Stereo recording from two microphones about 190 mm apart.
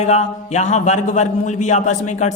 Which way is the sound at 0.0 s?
35° left (ahead or behind).